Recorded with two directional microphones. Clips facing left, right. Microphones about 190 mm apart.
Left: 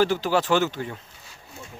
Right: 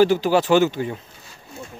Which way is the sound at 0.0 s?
15° right (ahead or behind).